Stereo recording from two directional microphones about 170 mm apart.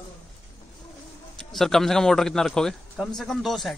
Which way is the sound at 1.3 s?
Centre (ahead or behind).